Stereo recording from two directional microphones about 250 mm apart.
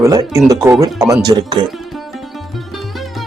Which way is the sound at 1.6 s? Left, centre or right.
Centre.